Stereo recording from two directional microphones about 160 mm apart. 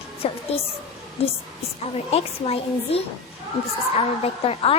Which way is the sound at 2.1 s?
40° left (ahead or behind).